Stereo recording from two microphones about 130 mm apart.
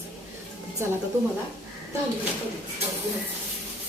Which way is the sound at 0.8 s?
20° right (ahead or behind).